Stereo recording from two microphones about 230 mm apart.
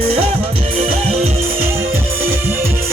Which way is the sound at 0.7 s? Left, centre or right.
Right.